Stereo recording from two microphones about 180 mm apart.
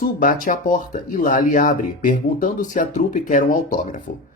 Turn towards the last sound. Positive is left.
turn(degrees=45)  # may be behind; listen again after turning